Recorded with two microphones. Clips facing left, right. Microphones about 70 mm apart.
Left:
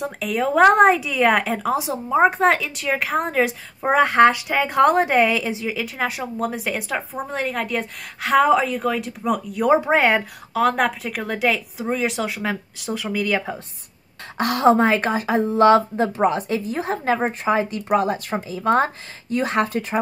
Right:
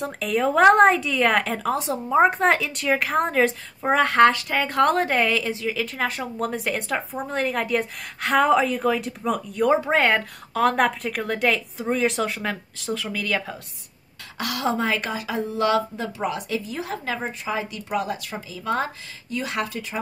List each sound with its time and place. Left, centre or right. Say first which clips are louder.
0.0 s speech: even; centre
9.7 s speech: left 3 dB; centre
14.4 s a woman's voice: left 8 dB; left